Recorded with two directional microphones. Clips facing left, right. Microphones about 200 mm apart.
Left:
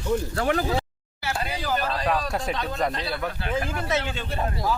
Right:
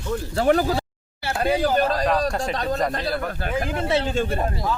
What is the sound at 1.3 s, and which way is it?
Speech, 55° right (ahead or behind).